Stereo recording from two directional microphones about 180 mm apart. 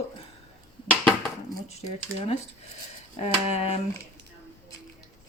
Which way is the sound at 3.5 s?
35° left (ahead or behind).